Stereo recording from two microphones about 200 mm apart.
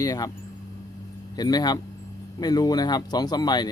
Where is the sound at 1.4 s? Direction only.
20° left (ahead or behind).